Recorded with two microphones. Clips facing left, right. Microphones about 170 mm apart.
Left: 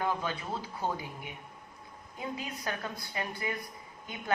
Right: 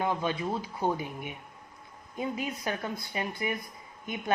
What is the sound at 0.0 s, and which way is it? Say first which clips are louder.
Speech: right 4 dB; 20° right (ahead or behind).